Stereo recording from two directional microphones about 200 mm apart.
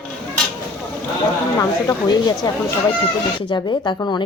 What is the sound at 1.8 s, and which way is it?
Speech, 20° left (ahead or behind).